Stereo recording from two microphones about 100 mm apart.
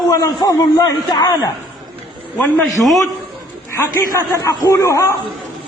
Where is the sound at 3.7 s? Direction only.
25° left (ahead or behind).